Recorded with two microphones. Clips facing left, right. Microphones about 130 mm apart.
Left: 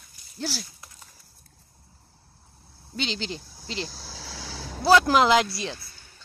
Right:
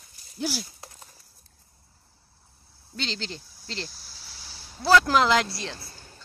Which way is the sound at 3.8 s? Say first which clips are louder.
Left 6 dB; 90° left.